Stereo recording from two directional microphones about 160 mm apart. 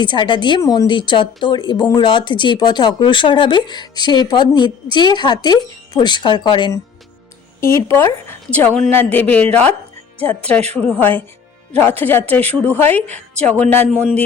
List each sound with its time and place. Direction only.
0.0 s a woman's voice: 30° left (ahead or behind)
7.6 s a woman's voice: 20° left (ahead or behind)
10.8 s a woman's voice: 10° left (ahead or behind)
13.0 s a woman's voice: 45° right (ahead or behind)
13.3 s a woman's voice: 5° left (ahead or behind)